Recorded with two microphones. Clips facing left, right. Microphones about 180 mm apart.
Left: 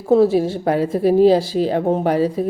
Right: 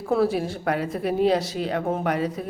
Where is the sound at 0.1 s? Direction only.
25° left (ahead or behind).